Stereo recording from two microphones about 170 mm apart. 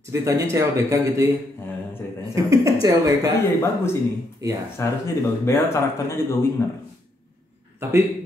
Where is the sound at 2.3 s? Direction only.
20° right (ahead or behind).